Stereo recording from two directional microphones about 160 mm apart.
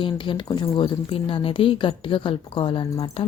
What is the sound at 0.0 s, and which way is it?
A woman's voice, 30° left (ahead or behind).